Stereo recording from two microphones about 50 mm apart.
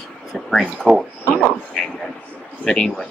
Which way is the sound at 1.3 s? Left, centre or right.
Centre.